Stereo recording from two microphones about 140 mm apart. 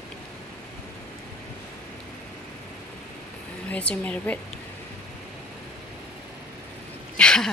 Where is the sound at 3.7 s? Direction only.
10° left (ahead or behind).